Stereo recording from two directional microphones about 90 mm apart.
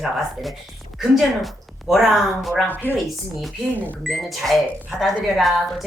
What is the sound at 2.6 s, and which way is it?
Speech, 20° left (ahead or behind).